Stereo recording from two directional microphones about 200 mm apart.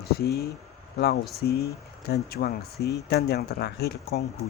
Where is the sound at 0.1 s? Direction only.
50° left (ahead or behind).